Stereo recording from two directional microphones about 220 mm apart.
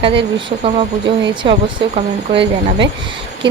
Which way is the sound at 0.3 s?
25° right (ahead or behind).